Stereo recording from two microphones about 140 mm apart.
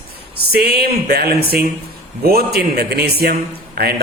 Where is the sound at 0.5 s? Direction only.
90° right.